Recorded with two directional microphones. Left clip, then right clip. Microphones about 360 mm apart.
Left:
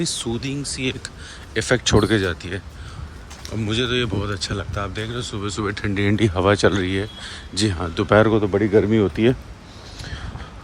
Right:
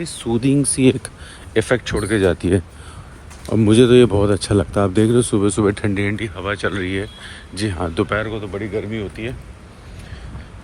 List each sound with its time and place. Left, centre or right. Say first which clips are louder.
0.0 s speech: right 4 dB; centre
3.6 s speech: right 11 dB; centre
8.2 s speech: left 8 dB; centre